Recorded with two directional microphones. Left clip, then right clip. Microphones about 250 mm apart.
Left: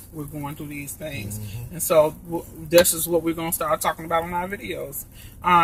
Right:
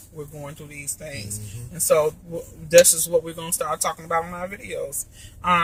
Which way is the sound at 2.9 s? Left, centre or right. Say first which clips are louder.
Right 1 dB; right.